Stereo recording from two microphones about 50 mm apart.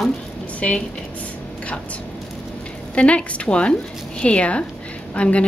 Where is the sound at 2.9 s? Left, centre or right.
Left.